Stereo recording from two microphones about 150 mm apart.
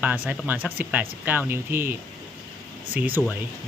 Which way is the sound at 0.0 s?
10° right (ahead or behind).